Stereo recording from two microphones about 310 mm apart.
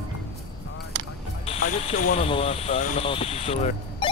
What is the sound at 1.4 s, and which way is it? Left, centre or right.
Speech, left.